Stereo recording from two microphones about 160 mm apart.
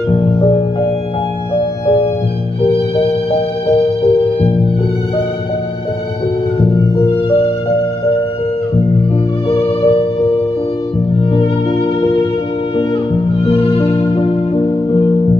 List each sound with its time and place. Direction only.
2.6 s music: 35° left (ahead or behind)
9.5 s music: 40° left (ahead or behind)
13.5 s music: 35° left (ahead or behind)